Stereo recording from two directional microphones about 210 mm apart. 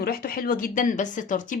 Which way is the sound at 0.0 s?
45° left (ahead or behind).